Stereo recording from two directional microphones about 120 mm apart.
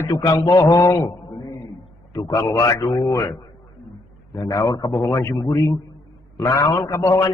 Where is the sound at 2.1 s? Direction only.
30° left (ahead or behind).